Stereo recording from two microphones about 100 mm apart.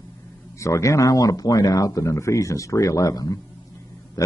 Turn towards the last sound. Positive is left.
turn(degrees=35)  # may be behind; listen again after turning